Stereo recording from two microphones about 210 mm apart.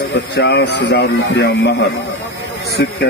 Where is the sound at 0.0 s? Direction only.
50° left (ahead or behind).